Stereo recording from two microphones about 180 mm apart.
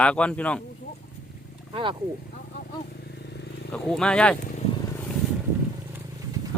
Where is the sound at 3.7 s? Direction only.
5° left (ahead or behind).